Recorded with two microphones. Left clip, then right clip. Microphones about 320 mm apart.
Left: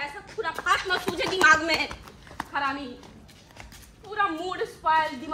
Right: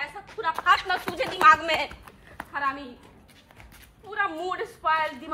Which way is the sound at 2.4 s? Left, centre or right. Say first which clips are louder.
Left 2 dB; centre.